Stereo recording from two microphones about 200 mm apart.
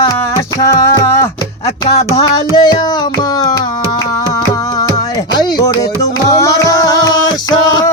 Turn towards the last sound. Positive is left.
turn(degrees=20)  # may be behind; listen again after turning